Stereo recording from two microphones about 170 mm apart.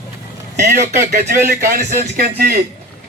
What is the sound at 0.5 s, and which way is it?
Speech, 45° right (ahead or behind).